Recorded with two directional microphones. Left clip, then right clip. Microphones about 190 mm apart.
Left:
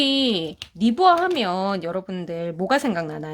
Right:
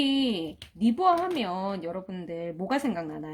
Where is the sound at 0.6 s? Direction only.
40° left (ahead or behind).